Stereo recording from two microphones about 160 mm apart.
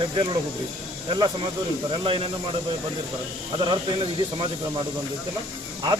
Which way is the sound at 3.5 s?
30° right (ahead or behind).